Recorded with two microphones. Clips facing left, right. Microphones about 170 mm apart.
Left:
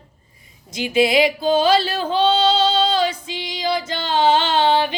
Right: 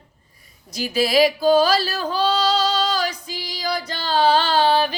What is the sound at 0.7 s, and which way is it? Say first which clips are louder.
Female singing: left 2 dB; 25° left (ahead or behind).